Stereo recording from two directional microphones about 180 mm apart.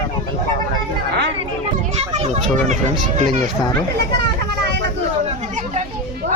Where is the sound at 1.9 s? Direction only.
35° right (ahead or behind).